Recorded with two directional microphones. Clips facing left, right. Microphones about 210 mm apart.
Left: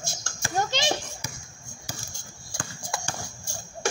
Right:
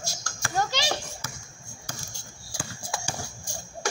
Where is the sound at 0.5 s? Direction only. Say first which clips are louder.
Left 1 dB; 20° left (ahead or behind).